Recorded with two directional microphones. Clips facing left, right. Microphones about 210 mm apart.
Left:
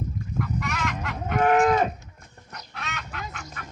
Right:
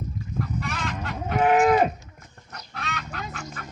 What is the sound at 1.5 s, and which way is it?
Cattle, 15° right (ahead or behind).